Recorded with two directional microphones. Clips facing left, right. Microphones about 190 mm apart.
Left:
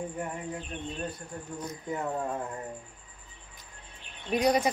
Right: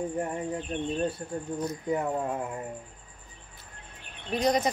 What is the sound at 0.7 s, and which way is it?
Speech, 35° right (ahead or behind).